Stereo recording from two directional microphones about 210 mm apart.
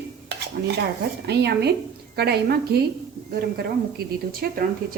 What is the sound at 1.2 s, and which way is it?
A woman's voice, 55° right (ahead or behind).